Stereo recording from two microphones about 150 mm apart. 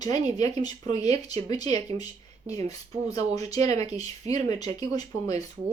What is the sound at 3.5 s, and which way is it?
Speech, 25° left (ahead or behind).